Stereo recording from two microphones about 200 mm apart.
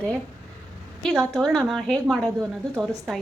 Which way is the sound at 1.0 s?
Centre (ahead or behind).